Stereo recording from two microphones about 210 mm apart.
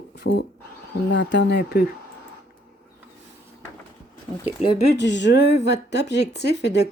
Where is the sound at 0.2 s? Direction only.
55° left (ahead or behind).